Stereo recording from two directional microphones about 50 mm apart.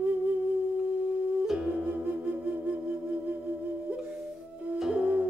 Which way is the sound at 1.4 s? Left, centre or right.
Centre.